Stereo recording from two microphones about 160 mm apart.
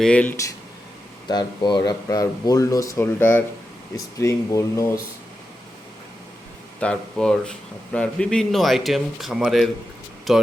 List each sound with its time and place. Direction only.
0.0 s speech: 5° left (ahead or behind)
1.3 s speech: 25° left (ahead or behind)
6.7 s speech: 5° left (ahead or behind)